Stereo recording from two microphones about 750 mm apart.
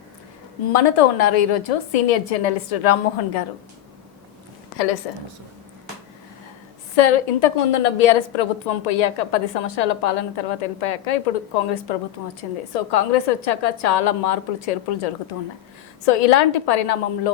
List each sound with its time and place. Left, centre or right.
0.7 s a woman's voice: left
6.9 s a woman's voice: left